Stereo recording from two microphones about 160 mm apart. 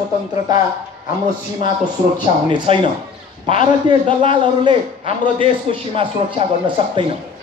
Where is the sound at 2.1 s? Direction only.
30° right (ahead or behind).